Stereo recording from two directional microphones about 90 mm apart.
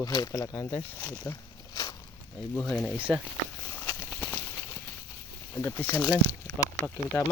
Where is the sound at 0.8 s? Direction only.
25° left (ahead or behind).